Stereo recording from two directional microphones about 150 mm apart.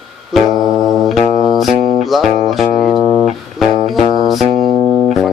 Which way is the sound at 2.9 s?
25° left (ahead or behind).